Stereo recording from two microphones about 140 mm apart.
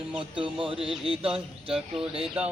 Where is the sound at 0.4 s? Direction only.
40° right (ahead or behind).